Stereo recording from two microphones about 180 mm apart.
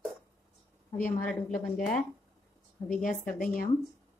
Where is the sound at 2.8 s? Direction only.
45° left (ahead or behind).